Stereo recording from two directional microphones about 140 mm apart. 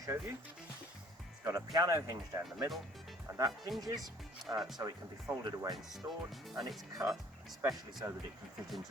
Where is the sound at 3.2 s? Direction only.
25° right (ahead or behind).